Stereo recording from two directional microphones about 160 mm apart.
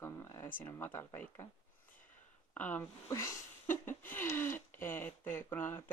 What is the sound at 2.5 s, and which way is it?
Speech, 10° left (ahead or behind).